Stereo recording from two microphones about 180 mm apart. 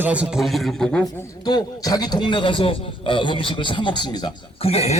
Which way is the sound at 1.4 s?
20° left (ahead or behind).